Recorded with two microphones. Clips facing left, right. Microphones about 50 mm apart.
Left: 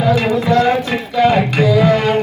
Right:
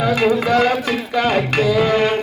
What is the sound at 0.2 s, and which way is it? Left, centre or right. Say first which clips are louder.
Speech: left 1 dB; right.